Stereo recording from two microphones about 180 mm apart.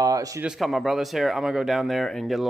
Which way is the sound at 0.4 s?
Centre (ahead or behind).